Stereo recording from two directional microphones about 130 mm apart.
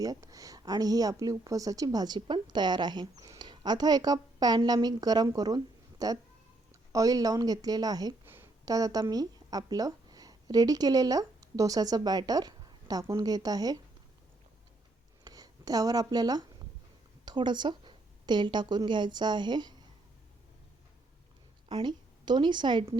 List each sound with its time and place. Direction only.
0.0 s a woman's voice: 30° right (ahead or behind)
15.2 s a woman's voice: 30° right (ahead or behind)
21.7 s a woman's voice: 35° right (ahead or behind)